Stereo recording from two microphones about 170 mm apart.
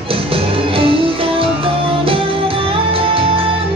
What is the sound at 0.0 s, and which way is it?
Music, 35° right (ahead or behind).